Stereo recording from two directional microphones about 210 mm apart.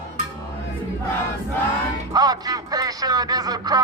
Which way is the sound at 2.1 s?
20° right (ahead or behind).